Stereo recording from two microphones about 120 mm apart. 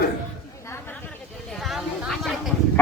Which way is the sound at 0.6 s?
25° left (ahead or behind).